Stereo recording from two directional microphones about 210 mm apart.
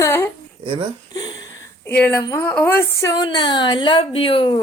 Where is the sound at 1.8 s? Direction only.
10° left (ahead or behind).